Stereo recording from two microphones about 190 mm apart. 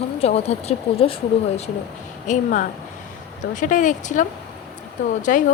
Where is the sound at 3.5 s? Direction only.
45° left (ahead or behind).